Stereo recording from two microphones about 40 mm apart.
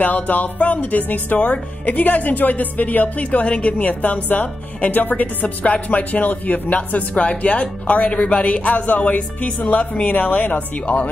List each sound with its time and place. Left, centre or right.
0.0 s speech: left
7.2 s speech: left